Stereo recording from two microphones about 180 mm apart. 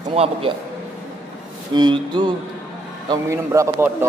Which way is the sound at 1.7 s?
25° right (ahead or behind).